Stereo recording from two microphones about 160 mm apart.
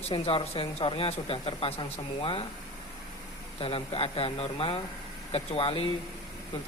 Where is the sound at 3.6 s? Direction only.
35° left (ahead or behind).